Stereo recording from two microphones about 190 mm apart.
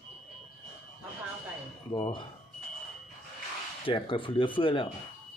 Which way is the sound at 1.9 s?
25° left (ahead or behind).